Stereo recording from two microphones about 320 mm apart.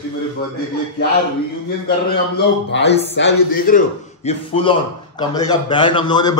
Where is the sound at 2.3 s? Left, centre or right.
Left.